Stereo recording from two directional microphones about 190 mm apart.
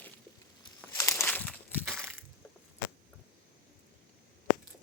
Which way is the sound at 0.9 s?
15° left (ahead or behind).